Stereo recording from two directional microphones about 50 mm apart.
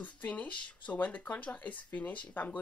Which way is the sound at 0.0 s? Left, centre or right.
Left.